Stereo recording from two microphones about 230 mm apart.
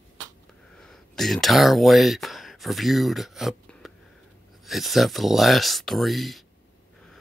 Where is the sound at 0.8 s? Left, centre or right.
Centre.